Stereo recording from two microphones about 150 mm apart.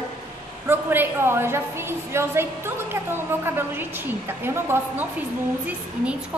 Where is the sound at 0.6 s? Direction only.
15° right (ahead or behind).